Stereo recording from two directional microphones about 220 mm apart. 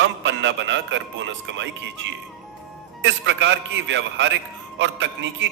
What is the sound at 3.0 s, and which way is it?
A man's voice, 55° right (ahead or behind).